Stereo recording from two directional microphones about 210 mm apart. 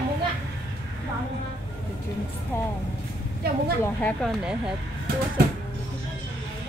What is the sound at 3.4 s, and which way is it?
Speech, 50° right (ahead or behind).